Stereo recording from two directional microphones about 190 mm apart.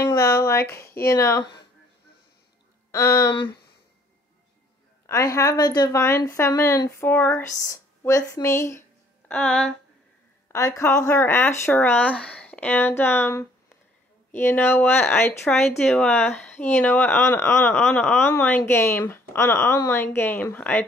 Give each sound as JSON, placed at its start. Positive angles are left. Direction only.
{"t": 0.0, "sound": "a sound", "side_deg": 15}
{"t": 1.0, "sound": "a woman's voice", "side_deg": 15}
{"t": 2.9, "sound": "a woman's voice", "side_deg": 15}
{"t": 5.0, "sound": "a woman's voice", "side_deg": 15}
{"t": 10.5, "sound": "a woman's voice", "side_deg": 15}